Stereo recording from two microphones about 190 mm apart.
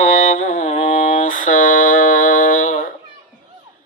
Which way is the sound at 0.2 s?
40° left (ahead or behind).